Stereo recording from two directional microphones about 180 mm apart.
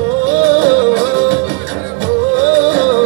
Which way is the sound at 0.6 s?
70° right (ahead or behind).